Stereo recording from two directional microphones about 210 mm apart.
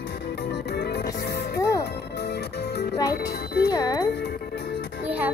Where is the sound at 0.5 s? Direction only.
50° left (ahead or behind).